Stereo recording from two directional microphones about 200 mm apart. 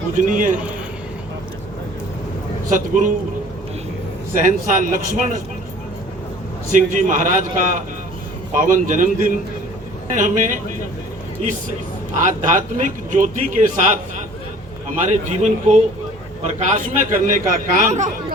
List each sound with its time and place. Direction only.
0.3 s a man's voice: 40° right (ahead or behind)
2.6 s a man's voice: 40° right (ahead or behind)
4.4 s a man's voice: 40° right (ahead or behind)
6.7 s a man's voice: 40° right (ahead or behind)
12.5 s a man's voice: 40° right (ahead or behind)